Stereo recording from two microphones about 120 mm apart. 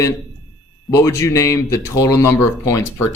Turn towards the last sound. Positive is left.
turn(degrees=25)  # may be behind; listen again after turning